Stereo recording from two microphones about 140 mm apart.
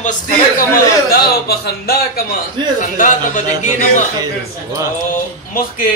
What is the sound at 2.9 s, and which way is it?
Speech, 65° left (ahead or behind).